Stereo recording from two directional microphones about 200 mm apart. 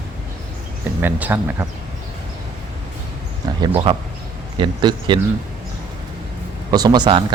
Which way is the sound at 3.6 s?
25° right (ahead or behind).